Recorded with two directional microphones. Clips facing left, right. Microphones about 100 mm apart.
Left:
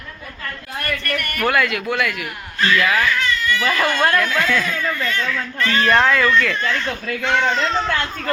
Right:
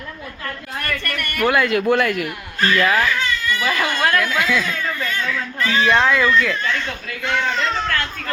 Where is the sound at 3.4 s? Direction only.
10° right (ahead or behind).